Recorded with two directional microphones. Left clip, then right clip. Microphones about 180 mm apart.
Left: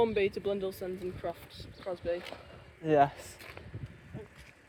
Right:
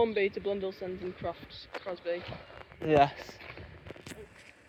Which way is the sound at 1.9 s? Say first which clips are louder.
Left 1 dB; 65° left (ahead or behind).